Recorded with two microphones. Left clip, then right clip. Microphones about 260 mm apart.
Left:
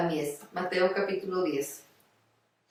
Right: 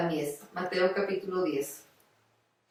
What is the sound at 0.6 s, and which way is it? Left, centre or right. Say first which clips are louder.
Music: left 1 dB; centre.